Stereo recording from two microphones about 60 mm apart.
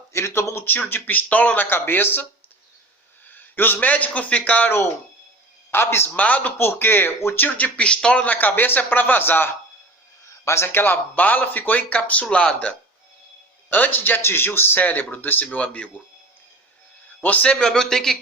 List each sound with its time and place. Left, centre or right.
0.1 s speech: left
1.7 s speech: left
3.2 s a man's voice: left
5.7 s speech: left
6.1 s speech: left
10.4 s speech: left; by 12.7 s centre
13.7 s speech: left
15.4 s speech: left
17.2 s speech: left